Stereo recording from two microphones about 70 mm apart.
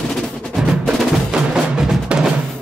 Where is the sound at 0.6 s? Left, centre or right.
Centre.